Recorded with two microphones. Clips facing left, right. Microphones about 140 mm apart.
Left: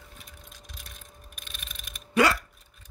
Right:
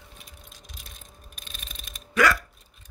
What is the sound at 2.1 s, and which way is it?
Hiccup, 25° left (ahead or behind).